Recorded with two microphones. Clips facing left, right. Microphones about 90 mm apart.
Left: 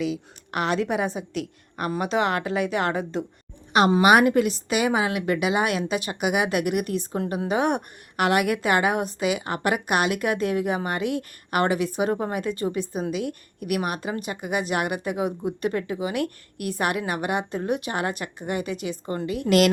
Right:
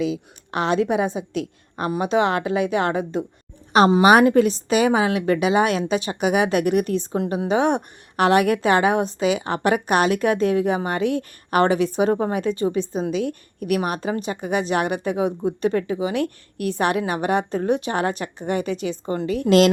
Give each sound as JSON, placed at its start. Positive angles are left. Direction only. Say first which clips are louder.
{"t": 0.1, "sound": "a woman's voice", "louder": "right 3 dB", "side_deg": -25}
{"t": 3.7, "sound": "a woman's voice", "louder": "right 3 dB", "side_deg": -35}